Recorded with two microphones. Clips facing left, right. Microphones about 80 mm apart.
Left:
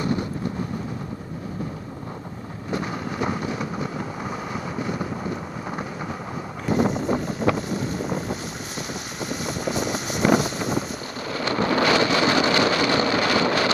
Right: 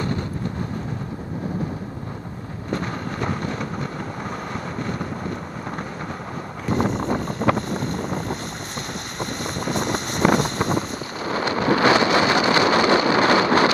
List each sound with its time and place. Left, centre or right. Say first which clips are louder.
2.7 s vehicle: right 1 dB; centre
6.6 s vehicle: left 1 dB; centre
7.5 s boat: right 1 dB; centre
9.2 s vehicle: even; centre
11.3 s a sound: right 2 dB; right